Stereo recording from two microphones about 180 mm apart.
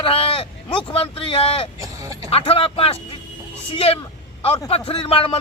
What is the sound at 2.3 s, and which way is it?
Speech, 30° left (ahead or behind).